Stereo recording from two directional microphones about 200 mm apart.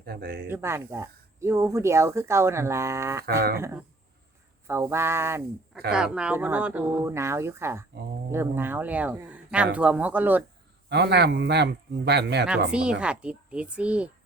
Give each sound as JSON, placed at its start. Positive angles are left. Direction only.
{"t": 0.0, "sound": "speech", "side_deg": -50}
{"t": 0.4, "sound": "speech", "side_deg": -10}
{"t": 3.2, "sound": "speech", "side_deg": -50}
{"t": 3.6, "sound": "speech", "side_deg": -10}
{"t": 10.8, "sound": "a man's voice", "side_deg": -60}
{"t": 12.5, "sound": "speech", "side_deg": -5}